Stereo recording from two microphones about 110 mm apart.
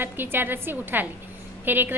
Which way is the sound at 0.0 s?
20° right (ahead or behind).